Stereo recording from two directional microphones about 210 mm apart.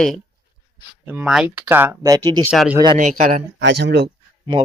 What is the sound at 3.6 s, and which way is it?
Speech, 55° right (ahead or behind).